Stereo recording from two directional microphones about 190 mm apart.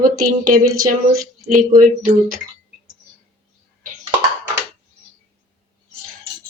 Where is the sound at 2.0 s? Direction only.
40° right (ahead or behind).